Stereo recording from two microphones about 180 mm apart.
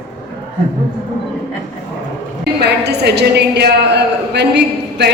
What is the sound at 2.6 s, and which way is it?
A woman's voice, 65° right (ahead or behind).